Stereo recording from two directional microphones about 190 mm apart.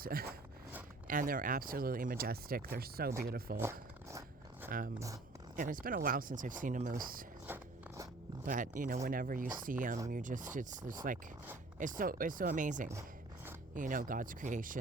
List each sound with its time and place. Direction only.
0.0 s speech: 50° right (ahead or behind)
3.6 s zipper: 15° right (ahead or behind)
4.7 s speech: 45° right (ahead or behind)
7.4 s biting: 10° right (ahead or behind)
8.4 s speech: 45° right (ahead or behind)